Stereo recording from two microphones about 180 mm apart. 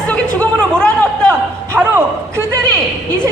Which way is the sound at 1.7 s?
10° right (ahead or behind).